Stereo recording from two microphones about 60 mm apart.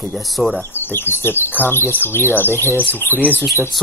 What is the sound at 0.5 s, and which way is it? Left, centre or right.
Speech, left.